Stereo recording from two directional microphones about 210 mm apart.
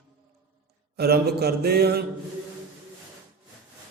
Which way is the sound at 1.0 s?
50° right (ahead or behind).